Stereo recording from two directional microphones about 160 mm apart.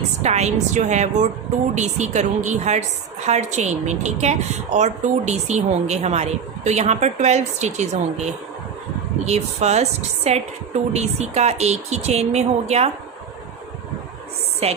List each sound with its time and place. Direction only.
0.2 s speech: 45° right (ahead or behind)
14.6 s a woman's voice: 40° right (ahead or behind)